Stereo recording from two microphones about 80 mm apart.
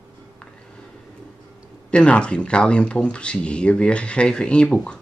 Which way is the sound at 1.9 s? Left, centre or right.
Centre.